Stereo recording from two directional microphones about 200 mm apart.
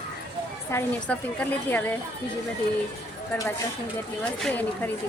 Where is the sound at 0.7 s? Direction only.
10° left (ahead or behind).